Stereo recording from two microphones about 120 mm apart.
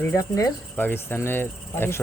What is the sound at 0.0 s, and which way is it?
Speech, 25° left (ahead or behind).